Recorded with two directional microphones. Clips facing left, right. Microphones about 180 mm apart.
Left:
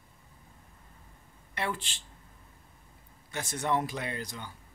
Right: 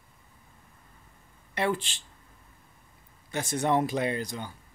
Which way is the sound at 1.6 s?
20° right (ahead or behind).